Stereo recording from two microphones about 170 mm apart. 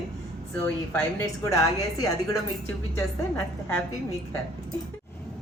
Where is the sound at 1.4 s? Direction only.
20° left (ahead or behind).